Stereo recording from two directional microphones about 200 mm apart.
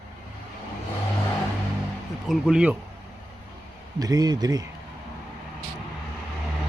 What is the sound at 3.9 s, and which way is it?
Speech, 20° right (ahead or behind).